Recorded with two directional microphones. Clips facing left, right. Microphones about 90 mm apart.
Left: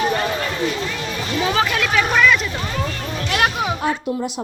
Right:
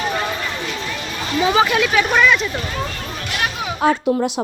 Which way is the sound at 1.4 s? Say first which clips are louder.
Right 4 dB; 5° right (ahead or behind).